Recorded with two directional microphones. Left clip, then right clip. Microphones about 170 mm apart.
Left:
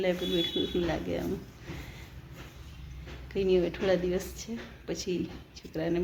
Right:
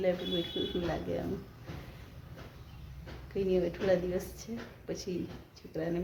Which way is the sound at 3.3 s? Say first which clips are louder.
Left 4 dB; 10° left (ahead or behind).